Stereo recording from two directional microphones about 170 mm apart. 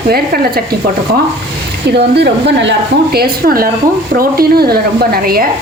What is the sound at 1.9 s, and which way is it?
A woman's voice, 80° right.